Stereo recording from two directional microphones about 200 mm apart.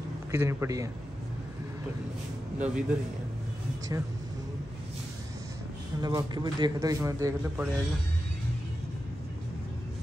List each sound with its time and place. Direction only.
0.3 s a man's voice: 10° right (ahead or behind)
2.6 s a man's voice: 5° right (ahead or behind)
5.9 s a man's voice: 20° right (ahead or behind)